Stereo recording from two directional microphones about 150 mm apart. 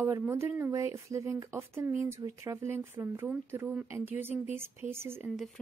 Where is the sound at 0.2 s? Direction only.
15° right (ahead or behind).